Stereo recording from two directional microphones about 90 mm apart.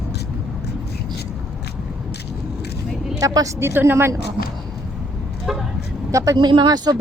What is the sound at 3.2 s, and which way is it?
Speech, 40° right (ahead or behind).